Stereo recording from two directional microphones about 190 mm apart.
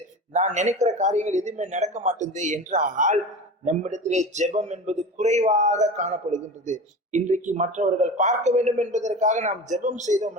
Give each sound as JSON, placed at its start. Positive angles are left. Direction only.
{"t": 0.3, "sound": "a man's voice", "side_deg": -40}